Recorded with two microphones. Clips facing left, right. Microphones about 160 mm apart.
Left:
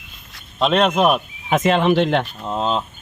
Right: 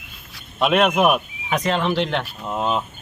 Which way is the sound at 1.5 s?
20° left (ahead or behind).